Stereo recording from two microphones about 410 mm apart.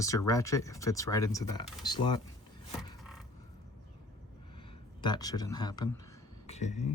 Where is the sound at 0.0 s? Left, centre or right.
Centre.